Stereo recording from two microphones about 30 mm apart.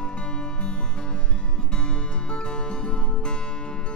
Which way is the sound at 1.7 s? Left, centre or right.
Left.